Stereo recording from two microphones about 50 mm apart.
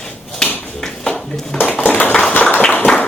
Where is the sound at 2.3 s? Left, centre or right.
Left.